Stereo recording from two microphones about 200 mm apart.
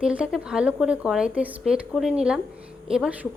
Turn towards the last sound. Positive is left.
turn(degrees=-5)  # may be behind; listen again after turning